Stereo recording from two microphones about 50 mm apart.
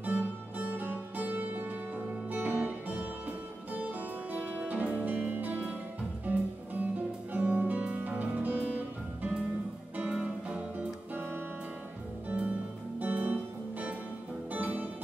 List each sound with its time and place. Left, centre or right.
0.0 s music: right
10.1 s music: right
12.3 s music: right